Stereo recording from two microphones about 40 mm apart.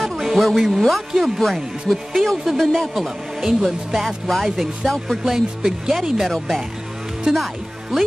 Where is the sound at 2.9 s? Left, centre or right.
Centre.